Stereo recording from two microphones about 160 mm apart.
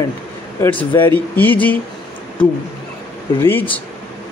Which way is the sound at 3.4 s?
15° left (ahead or behind).